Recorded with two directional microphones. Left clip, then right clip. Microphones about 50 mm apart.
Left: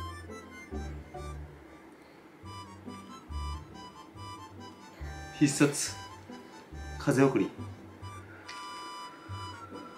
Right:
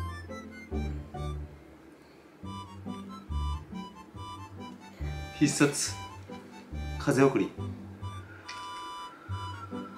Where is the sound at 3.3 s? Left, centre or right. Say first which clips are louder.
Right 2 dB; right.